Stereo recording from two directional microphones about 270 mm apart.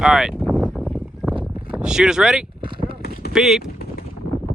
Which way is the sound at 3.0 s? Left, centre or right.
Left.